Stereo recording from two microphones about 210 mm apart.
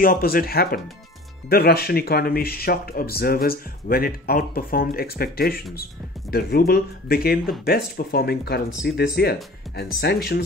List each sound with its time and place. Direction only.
0.0 s speech: 45° left (ahead or behind)